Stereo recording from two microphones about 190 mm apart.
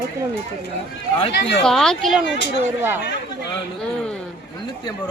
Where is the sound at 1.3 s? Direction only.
65° left (ahead or behind).